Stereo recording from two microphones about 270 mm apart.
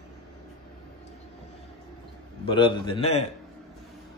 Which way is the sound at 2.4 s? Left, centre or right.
Centre.